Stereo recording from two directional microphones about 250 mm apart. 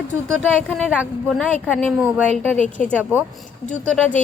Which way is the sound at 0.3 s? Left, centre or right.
Centre.